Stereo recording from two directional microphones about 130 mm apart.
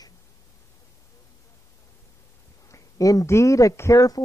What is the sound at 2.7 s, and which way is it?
Speech, 25° left (ahead or behind).